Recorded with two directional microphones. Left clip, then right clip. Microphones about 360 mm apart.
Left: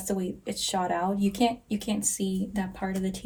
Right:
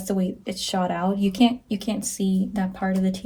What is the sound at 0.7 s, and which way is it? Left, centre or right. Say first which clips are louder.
Speech: right 3 dB; centre.